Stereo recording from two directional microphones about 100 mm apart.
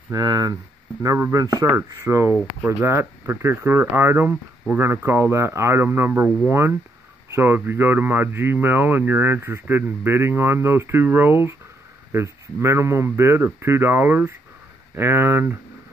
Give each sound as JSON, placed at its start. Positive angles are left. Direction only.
{"t": 0.1, "sound": "speech", "side_deg": -40}